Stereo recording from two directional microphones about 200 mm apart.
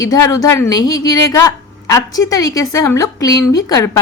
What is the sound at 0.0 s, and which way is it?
A woman's voice, 15° left (ahead or behind).